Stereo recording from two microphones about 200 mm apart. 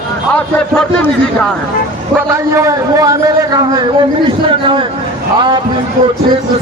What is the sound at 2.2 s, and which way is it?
Speech, 15° right (ahead or behind).